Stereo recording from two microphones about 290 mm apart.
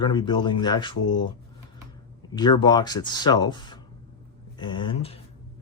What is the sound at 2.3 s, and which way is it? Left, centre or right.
Speech, centre.